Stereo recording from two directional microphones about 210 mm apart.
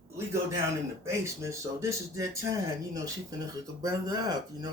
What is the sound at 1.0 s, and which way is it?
Speech, 15° right (ahead or behind).